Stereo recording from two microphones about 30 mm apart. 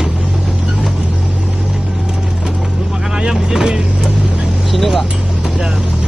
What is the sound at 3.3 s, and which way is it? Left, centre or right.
Vehicle, centre.